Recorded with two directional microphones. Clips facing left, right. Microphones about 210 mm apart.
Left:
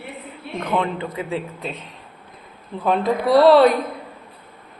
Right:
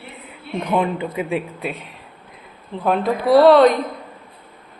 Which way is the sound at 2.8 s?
Centre (ahead or behind).